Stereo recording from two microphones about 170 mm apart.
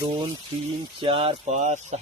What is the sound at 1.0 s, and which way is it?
Speech, 35° right (ahead or behind).